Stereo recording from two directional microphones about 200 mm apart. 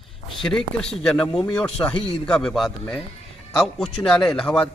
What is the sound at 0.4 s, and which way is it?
A man's voice, 5° left (ahead or behind).